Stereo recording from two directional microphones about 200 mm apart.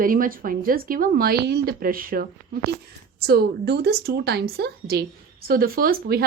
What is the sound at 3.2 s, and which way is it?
A woman's voice, 55° right (ahead or behind).